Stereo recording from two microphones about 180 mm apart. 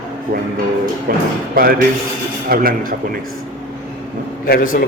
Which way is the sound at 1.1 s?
55° right (ahead or behind).